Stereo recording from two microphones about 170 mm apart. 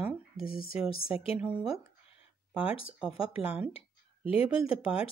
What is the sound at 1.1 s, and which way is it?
Speech, 35° left (ahead or behind).